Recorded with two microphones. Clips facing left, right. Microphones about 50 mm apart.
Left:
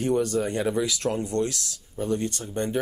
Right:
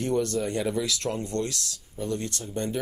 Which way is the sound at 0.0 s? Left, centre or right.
Centre.